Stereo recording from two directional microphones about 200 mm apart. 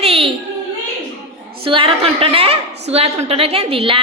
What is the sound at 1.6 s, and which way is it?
A woman's voice, 25° right (ahead or behind).